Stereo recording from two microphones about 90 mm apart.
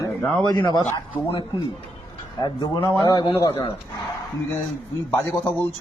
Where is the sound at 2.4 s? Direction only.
50° left (ahead or behind).